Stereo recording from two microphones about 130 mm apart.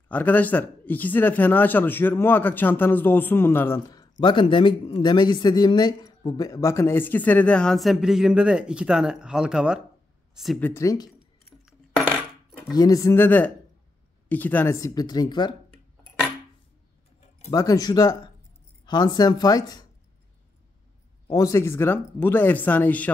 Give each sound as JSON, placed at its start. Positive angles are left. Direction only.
{"t": 0.1, "sound": "speech", "side_deg": 15}
{"t": 3.9, "sound": "speech", "side_deg": 35}
{"t": 10.6, "sound": "speech", "side_deg": 20}
{"t": 12.1, "sound": "coin", "side_deg": 0}
{"t": 12.7, "sound": "speech", "side_deg": 30}
{"t": 17.5, "sound": "speech", "side_deg": 30}
{"t": 21.3, "sound": "speech", "side_deg": 25}